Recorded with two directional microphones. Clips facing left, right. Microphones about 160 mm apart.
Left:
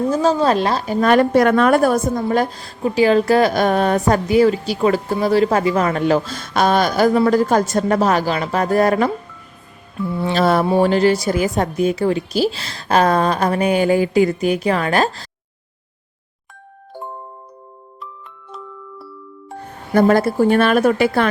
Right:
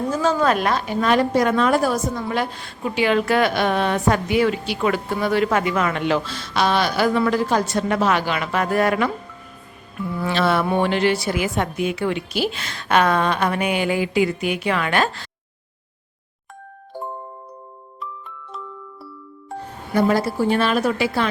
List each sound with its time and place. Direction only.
0.1 s a woman's voice: 35° left (ahead or behind)
1.0 s a woman's voice: 55° left (ahead or behind)
2.2 s a woman's voice: 40° left (ahead or behind)
10.3 s a woman's voice: 40° left (ahead or behind)
19.9 s a woman's voice: 50° left (ahead or behind)